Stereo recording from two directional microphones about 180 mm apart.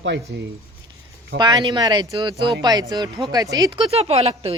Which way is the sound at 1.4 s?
20° right (ahead or behind).